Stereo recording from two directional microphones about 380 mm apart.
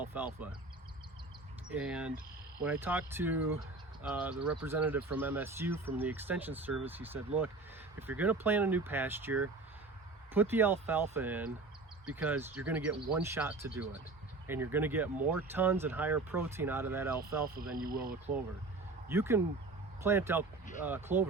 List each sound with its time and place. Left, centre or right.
0.0 s speech: centre
1.7 s speech: centre
17.8 s speech: right
19.0 s speech: centre